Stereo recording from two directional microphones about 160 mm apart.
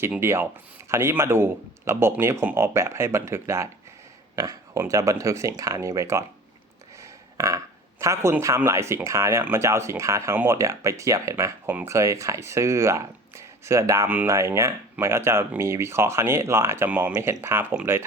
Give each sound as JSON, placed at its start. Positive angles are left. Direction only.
{"t": 0.0, "sound": "a man's voice", "side_deg": -15}